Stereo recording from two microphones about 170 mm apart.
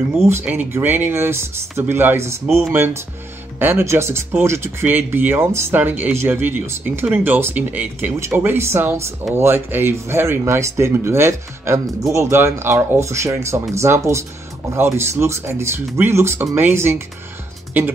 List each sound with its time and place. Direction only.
0.3 s speech: 10° right (ahead or behind)